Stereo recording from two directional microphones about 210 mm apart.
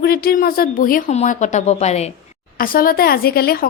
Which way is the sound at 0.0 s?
45° left (ahead or behind).